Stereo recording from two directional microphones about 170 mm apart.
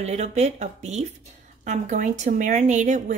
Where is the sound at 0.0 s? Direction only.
40° right (ahead or behind).